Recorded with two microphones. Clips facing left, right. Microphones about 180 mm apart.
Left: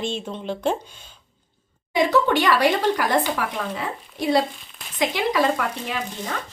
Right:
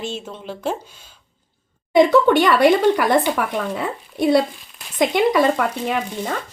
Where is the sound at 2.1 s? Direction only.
55° right (ahead or behind).